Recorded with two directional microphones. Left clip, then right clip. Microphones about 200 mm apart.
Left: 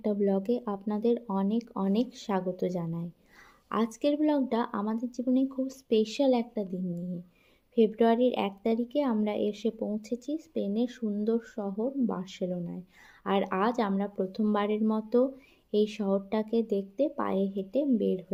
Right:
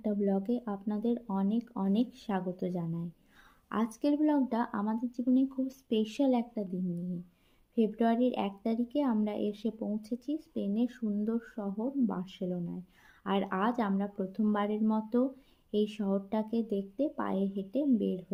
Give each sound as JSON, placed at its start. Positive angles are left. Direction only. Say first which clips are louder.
{"t": 0.0, "sound": "a woman's voice", "louder": "left 4 dB", "side_deg": 25}